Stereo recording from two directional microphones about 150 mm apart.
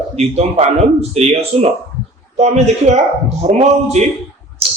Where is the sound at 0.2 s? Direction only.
45° right (ahead or behind).